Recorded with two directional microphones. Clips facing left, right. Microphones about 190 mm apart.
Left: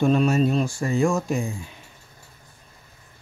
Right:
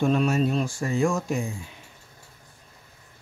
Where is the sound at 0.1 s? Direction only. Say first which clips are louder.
Left 3 dB; 30° left (ahead or behind).